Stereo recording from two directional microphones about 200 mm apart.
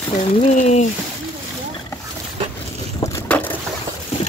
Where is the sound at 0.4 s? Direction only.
35° left (ahead or behind).